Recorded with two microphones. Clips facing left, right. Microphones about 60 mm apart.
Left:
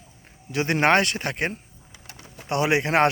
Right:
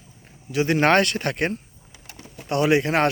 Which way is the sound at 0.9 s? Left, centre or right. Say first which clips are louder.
Right 2 dB; centre.